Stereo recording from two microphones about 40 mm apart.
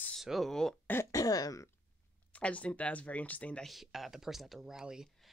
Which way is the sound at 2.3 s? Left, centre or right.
Left.